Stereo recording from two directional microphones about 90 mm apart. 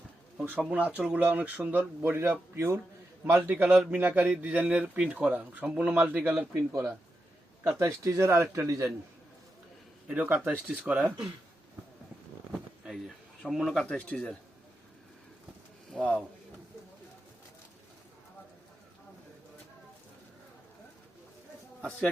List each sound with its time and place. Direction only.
0.6 s a man's voice: 15° right (ahead or behind)
6.5 s speech: 30° right (ahead or behind)
8.6 s speech: 40° right (ahead or behind)
10.1 s speech: 20° right (ahead or behind)
13.5 s speech: centre (ahead or behind)
13.8 s speech: 10° left (ahead or behind)
15.9 s speech: 5° left (ahead or behind)
21.8 s a man's voice: 15° left (ahead or behind)